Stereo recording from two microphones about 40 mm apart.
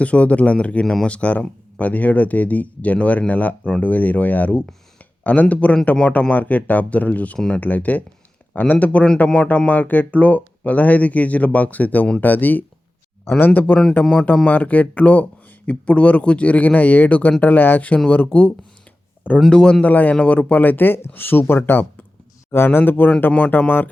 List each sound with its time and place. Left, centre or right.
0.0 s speech: left
18.3 s speech: left
19.8 s speech: left
22.8 s speech: left